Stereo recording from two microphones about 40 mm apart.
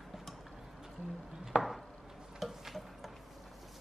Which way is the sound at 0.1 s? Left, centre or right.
Centre.